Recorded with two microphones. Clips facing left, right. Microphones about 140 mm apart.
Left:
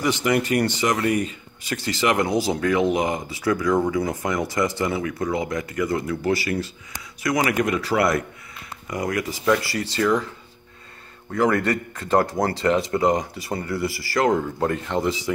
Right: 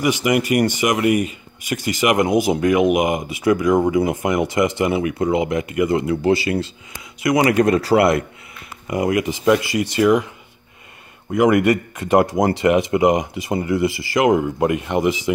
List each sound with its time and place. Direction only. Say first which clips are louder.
0.0 s speech: right 3 dB; 10° right (ahead or behind)
7.5 s speech: right 7 dB; 40° right (ahead or behind)
8.8 s speech: right 6 dB; 20° right (ahead or behind)